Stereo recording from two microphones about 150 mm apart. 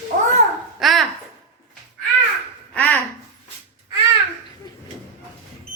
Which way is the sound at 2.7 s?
10° left (ahead or behind).